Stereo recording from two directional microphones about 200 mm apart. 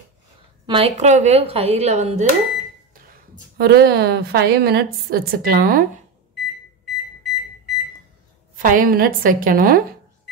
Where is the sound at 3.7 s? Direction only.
55° right (ahead or behind).